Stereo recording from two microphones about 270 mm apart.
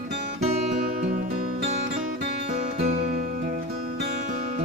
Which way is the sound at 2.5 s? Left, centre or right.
Right.